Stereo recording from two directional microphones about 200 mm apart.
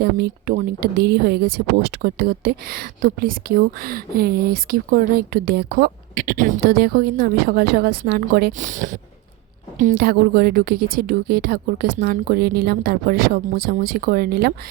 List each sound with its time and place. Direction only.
0.0 s speech: 50° right (ahead or behind)